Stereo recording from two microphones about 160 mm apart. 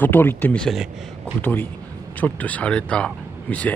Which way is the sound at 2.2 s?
10° left (ahead or behind).